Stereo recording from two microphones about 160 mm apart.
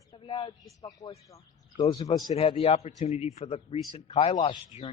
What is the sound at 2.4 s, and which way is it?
A man's voice, 35° left (ahead or behind).